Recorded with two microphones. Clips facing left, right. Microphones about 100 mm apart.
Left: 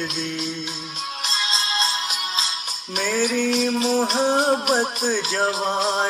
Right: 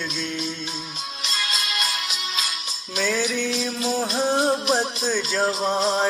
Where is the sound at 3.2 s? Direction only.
60° left (ahead or behind).